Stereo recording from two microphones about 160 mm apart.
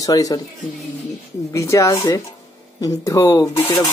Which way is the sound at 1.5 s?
20° left (ahead or behind).